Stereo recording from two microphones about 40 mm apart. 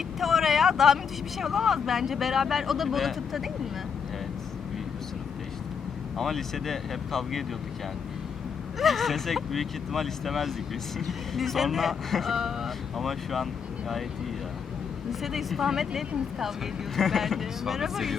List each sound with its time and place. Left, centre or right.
0.2 s vehicle: centre
1.4 s speech: centre
6.1 s speech: centre
8.8 s speech: centre
15.2 s speech: centre